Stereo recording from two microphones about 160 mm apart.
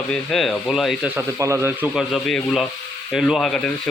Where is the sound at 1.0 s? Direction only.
15° right (ahead or behind).